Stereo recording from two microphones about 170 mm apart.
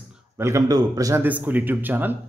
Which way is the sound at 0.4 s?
15° right (ahead or behind).